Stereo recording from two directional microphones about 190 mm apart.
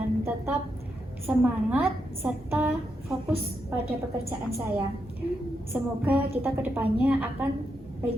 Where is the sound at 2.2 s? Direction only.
10° right (ahead or behind).